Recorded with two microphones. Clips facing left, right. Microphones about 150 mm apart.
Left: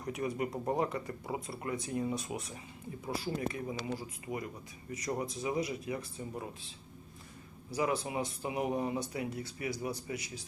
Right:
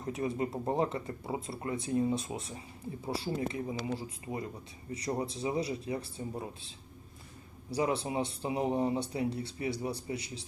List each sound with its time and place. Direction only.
0.0 s speech: 25° right (ahead or behind)
7.7 s speech: 30° right (ahead or behind)